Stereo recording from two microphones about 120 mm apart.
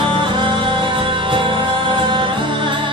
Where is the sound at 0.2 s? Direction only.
40° right (ahead or behind).